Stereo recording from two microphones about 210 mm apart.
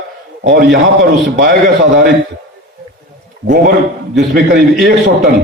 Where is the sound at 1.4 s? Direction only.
50° right (ahead or behind).